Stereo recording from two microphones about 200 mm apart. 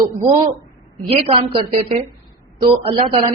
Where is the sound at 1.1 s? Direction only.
30° right (ahead or behind).